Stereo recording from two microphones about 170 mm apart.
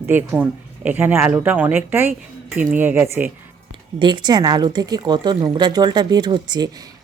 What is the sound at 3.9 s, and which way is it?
Speech, 25° right (ahead or behind).